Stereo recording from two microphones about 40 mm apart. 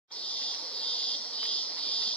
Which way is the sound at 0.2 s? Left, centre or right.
Left.